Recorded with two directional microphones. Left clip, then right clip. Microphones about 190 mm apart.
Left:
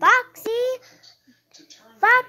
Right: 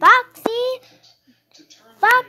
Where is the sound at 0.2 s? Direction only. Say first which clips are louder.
Right 2 dB; 5° left (ahead or behind).